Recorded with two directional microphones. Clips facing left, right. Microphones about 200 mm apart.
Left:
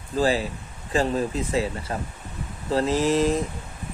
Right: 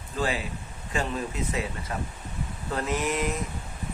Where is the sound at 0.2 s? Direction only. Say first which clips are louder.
Left 6 dB; 35° left (ahead or behind).